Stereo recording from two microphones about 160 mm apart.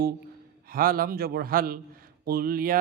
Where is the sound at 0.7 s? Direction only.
65° right (ahead or behind).